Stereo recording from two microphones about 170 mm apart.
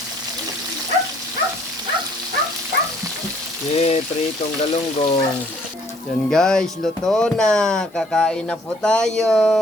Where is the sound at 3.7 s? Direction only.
40° left (ahead or behind).